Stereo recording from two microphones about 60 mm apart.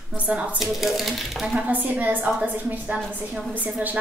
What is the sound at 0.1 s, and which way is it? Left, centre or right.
Speech, centre.